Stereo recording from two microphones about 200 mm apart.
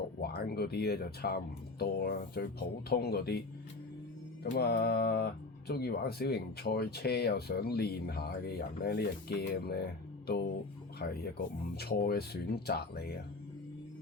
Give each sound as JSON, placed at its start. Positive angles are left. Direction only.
{"t": 0.2, "sound": "speech", "side_deg": 50}
{"t": 4.4, "sound": "speech", "side_deg": 55}